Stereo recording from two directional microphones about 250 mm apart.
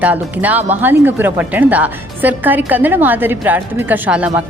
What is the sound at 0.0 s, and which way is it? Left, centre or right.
A woman's voice, centre.